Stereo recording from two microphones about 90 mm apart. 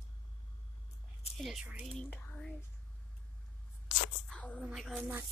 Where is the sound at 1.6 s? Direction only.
15° right (ahead or behind).